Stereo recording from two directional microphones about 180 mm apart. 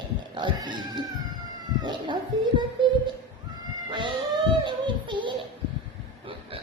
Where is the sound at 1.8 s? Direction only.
25° right (ahead or behind).